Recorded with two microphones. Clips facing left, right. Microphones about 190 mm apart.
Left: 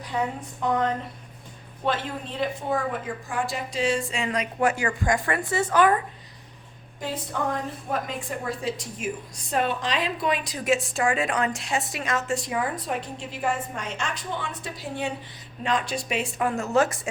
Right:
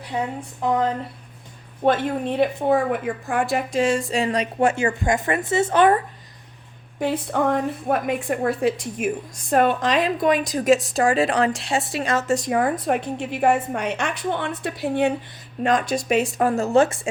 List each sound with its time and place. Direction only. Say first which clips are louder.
0.1 s speech: right 2 dB; 25° right (ahead or behind)
1.8 s a woman's voice: right 8 dB; 55° right (ahead or behind); by 6.0 s 25° right (ahead or behind)
7.0 s a woman's voice: right 8 dB; 60° right (ahead or behind)
15.6 s a woman's voice: right 6 dB; 45° right (ahead or behind); by 17.1 s 25° right (ahead or behind)